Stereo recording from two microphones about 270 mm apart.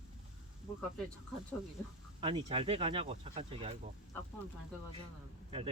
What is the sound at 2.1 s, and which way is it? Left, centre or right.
Speech, centre.